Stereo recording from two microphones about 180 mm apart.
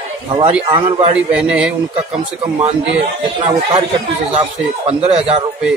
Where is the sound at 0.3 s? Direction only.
30° right (ahead or behind).